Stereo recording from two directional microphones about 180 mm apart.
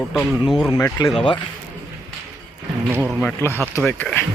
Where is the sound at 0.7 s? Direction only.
20° left (ahead or behind).